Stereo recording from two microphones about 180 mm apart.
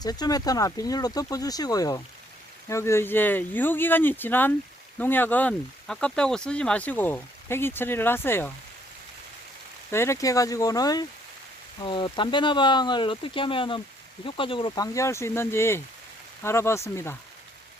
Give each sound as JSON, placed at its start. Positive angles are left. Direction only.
{"t": 0.0, "sound": "speech", "side_deg": 20}
{"t": 9.9, "sound": "speech", "side_deg": 15}
{"t": 14.9, "sound": "speech", "side_deg": 15}